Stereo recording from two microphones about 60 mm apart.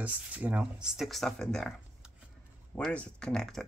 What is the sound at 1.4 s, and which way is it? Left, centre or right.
Speech, centre.